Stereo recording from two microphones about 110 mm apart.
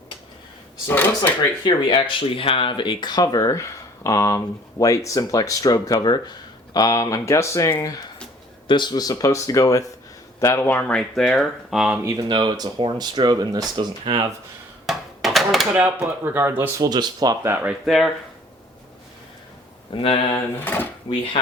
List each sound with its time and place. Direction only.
0.9 s speech: 20° left (ahead or behind)
1.6 s speech: 45° left (ahead or behind); by 8.0 s 30° left (ahead or behind)
8.6 s speech: 45° left (ahead or behind)
10.4 s speech: 20° left (ahead or behind)
11.1 s speech: 5° left (ahead or behind)
12.0 s speech: 40° right (ahead or behind)
14.0 s speech: 55° right (ahead or behind)
14.8 s a sound: centre (ahead or behind)
16.0 s speech: 20° right (ahead or behind)
16.8 s speech: 35° right (ahead or behind)
17.4 s speech: 20° right (ahead or behind)
17.8 s speech: centre (ahead or behind)
19.9 s speech: 55° left (ahead or behind)
20.3 s speech: 20° left (ahead or behind)